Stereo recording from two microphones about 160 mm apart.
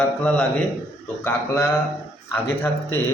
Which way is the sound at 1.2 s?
15° left (ahead or behind).